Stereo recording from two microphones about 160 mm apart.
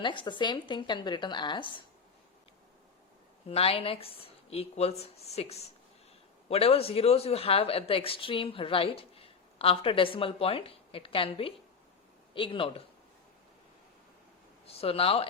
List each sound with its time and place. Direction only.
0.0 s speech: 30° left (ahead or behind)
3.5 s a woman's voice: 35° left (ahead or behind)
14.7 s a woman's voice: 35° left (ahead or behind)